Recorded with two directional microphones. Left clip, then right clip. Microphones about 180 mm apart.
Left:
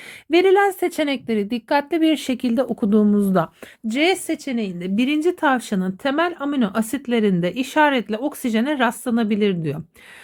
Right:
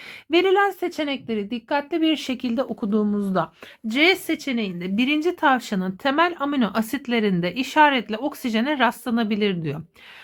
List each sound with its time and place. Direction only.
0.3 s speech: 25° left (ahead or behind)
3.8 s a woman's voice: 15° left (ahead or behind)